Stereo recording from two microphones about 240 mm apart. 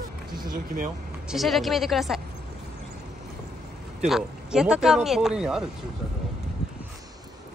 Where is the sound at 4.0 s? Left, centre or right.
Centre.